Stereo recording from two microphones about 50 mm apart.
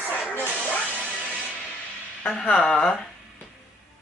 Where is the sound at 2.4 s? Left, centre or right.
Centre.